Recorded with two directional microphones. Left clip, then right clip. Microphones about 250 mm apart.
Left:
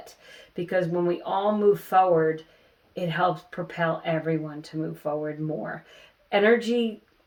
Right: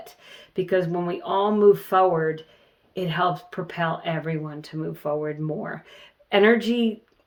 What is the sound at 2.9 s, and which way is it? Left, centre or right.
Speech, right.